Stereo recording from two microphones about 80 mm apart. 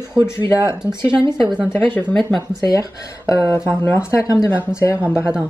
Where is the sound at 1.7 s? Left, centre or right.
Left.